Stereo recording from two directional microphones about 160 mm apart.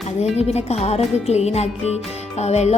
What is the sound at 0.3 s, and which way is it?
A woman's voice, 40° left (ahead or behind).